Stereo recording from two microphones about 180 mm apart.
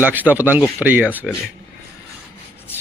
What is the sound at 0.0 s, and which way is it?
Speech, 10° right (ahead or behind).